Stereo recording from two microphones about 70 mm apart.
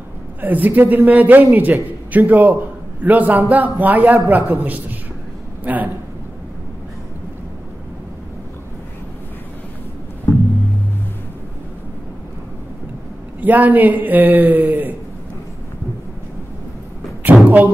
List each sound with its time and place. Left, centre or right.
0.4 s a man's voice: right
5.6 s a man's voice: right
13.4 s a man's voice: right
17.3 s a sound: centre